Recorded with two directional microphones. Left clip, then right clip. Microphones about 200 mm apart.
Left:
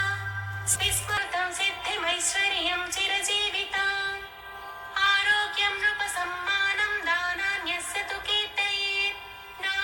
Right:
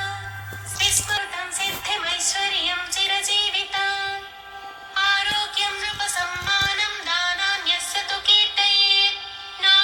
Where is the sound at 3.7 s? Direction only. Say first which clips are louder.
Right 3 dB; 35° right (ahead or behind).